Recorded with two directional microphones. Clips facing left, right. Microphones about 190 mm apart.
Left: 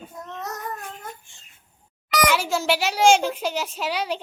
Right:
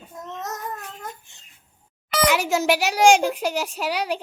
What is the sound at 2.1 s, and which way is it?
A child's voice, 15° right (ahead or behind).